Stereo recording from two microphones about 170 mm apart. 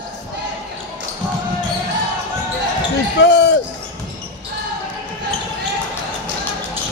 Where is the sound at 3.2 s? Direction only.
90° left.